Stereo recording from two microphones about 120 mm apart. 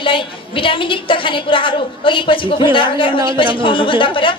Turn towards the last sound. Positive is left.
turn(degrees=45)  # may be behind; listen again after turning